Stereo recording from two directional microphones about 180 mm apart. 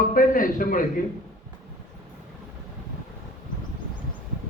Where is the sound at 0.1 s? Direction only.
50° left (ahead or behind).